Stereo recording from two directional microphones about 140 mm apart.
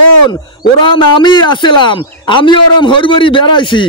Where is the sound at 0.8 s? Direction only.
35° left (ahead or behind).